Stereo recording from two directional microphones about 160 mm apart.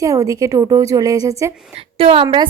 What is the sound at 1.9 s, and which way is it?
Speech, 35° right (ahead or behind).